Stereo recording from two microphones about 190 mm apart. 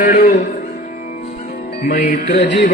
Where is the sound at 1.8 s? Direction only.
45° left (ahead or behind).